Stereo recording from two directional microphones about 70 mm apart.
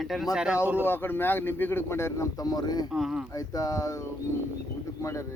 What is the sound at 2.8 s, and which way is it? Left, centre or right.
Speech, centre.